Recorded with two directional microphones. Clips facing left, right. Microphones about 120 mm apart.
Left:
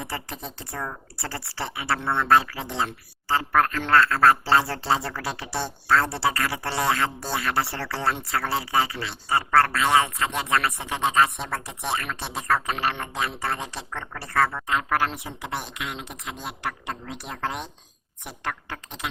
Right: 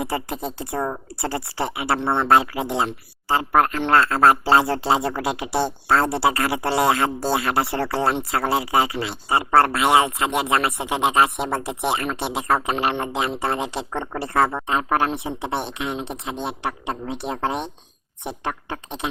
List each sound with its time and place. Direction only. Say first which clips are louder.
0.0 s speech: right 8 dB; 25° right (ahead or behind)